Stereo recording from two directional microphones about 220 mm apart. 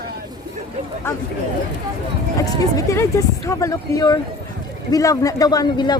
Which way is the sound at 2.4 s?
15° left (ahead or behind).